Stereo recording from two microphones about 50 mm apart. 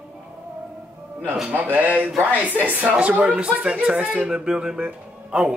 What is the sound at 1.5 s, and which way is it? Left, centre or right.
Speech, right.